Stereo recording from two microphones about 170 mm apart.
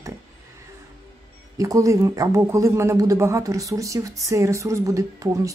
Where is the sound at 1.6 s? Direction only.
20° right (ahead or behind).